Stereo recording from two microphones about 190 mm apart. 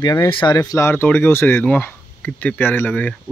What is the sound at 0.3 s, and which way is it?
Speech, 25° left (ahead or behind).